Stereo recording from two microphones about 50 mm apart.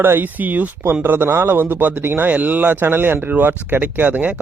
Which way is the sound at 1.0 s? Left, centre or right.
Right.